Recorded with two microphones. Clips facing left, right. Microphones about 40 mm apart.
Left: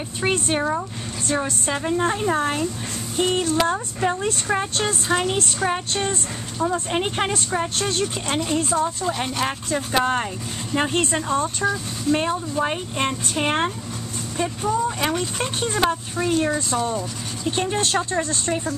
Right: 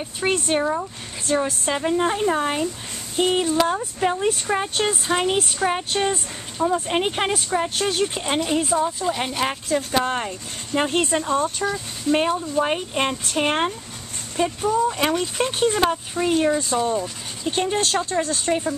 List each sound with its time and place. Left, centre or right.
0.2 s a woman's voice: centre
12.1 s a woman's voice: centre
18.2 s a woman's voice: centre